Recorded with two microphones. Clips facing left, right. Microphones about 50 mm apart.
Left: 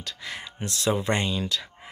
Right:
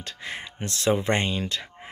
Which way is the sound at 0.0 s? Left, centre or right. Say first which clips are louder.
Right 1 dB; right.